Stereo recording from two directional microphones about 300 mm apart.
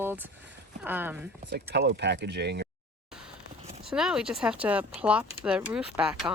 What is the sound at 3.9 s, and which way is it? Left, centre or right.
Speech, centre.